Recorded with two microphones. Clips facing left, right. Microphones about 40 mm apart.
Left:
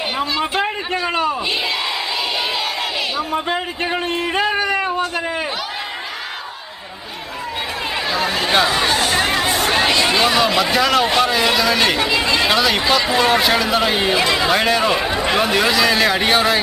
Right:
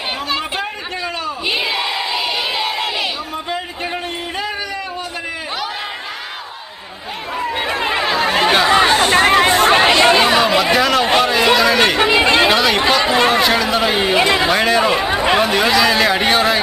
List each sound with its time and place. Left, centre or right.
0.6 s a sound: left
3.3 s a sound: left
7.9 s chatter: right; by 11.0 s centre
11.2 s speech: centre
11.9 s speech: right
12.5 s speech: centre
13.0 s speech: right
13.3 s speech: centre
14.1 s speech: right
14.5 s speech: centre
15.1 s speech: right
15.4 s speech: centre